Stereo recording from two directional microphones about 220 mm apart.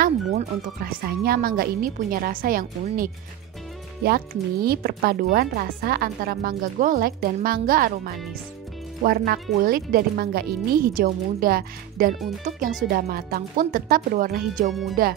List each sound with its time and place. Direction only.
0.0 s speech: 40° right (ahead or behind)
14.7 s speech: centre (ahead or behind)